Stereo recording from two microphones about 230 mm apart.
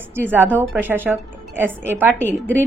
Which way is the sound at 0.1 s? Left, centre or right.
Centre.